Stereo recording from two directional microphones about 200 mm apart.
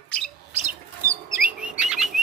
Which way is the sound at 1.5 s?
5° right (ahead or behind).